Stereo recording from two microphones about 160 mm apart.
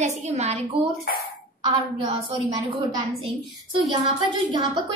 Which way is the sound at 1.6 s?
30° right (ahead or behind).